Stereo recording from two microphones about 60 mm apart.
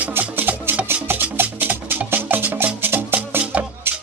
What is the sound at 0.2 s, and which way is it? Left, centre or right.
Music, right.